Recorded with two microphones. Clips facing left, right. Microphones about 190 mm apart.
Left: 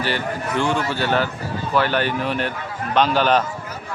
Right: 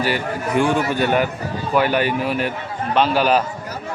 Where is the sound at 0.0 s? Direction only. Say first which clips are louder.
Right 2 dB; 10° right (ahead or behind).